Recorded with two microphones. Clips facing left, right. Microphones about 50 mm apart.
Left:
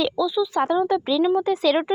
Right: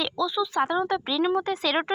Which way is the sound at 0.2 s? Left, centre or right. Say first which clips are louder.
Even; right.